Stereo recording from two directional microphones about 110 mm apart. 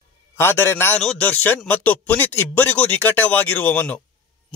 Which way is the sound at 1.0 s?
10° left (ahead or behind).